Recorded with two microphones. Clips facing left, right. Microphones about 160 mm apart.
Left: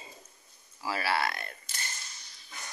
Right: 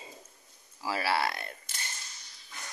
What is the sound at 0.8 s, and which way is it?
Speech, 25° right (ahead or behind).